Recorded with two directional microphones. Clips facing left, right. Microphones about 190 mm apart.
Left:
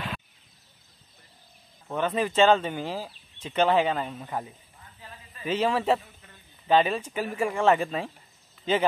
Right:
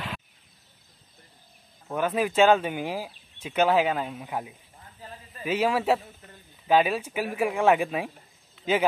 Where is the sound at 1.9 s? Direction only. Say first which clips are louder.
Right 1 dB; 10° right (ahead or behind).